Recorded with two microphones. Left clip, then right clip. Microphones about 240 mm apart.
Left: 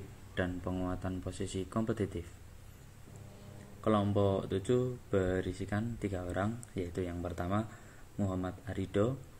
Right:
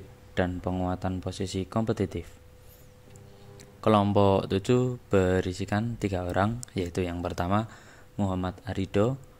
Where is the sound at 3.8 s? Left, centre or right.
Right.